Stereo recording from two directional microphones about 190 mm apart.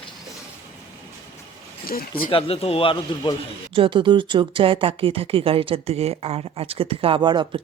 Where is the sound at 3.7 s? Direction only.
25° right (ahead or behind).